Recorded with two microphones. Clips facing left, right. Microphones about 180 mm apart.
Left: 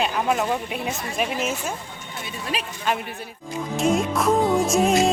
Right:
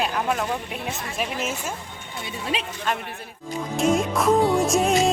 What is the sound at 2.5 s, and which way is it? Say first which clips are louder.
Speech: even; 25° right (ahead or behind).